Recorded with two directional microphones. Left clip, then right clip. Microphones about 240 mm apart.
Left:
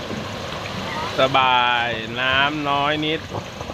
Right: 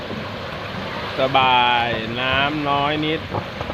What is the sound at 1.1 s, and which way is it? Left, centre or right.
Speech, centre.